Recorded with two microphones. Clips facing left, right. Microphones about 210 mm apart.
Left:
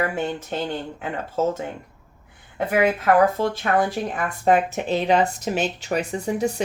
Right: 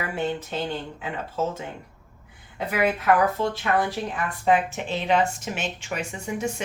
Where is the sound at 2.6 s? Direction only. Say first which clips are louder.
Left 4 dB; 50° left (ahead or behind).